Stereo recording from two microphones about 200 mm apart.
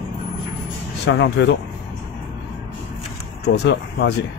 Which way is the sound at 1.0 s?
60° left (ahead or behind).